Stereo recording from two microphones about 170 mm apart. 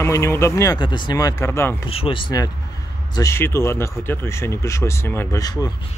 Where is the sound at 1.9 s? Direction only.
30° left (ahead or behind).